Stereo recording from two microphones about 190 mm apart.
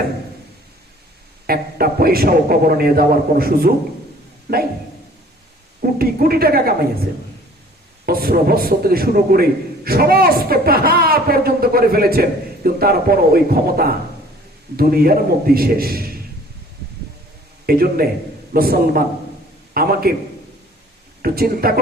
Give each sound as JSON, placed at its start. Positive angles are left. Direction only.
{"t": 1.5, "sound": "a man's voice", "side_deg": -50}
{"t": 5.8, "sound": "a man's voice", "side_deg": -50}
{"t": 8.0, "sound": "a man's voice", "side_deg": -55}
{"t": 17.7, "sound": "a man's voice", "side_deg": -50}
{"t": 21.2, "sound": "a man's voice", "side_deg": -50}